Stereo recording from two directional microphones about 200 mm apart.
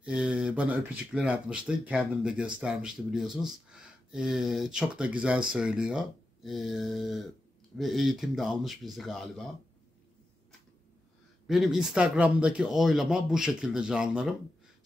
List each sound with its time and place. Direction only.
0.0 s speech: 5° right (ahead or behind)
11.4 s speech: centre (ahead or behind)